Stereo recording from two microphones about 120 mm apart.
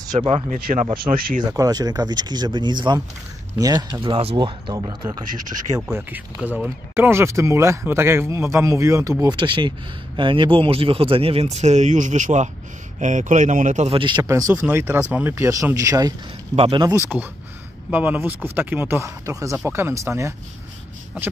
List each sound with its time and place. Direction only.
0.1 s speech: 60° right (ahead or behind)
0.8 s speech: 45° right (ahead or behind)
1.5 s speech: 30° right (ahead or behind)
4.0 s speech: 50° right (ahead or behind)
5.9 s speech: 20° right (ahead or behind); by 13.8 s 90° right
13.8 s speech: 45° right (ahead or behind)
14.2 s speech: 30° right (ahead or behind)
14.5 s speech: 15° right (ahead or behind)
16.5 s speech: 55° right (ahead or behind)
16.8 s speech: 25° right (ahead or behind)